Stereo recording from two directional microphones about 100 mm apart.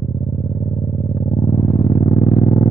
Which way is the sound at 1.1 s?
45° left (ahead or behind).